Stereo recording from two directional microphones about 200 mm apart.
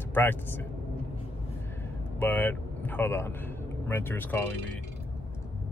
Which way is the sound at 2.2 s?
10° left (ahead or behind).